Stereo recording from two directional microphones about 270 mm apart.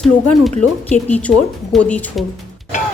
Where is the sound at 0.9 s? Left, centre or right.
Centre.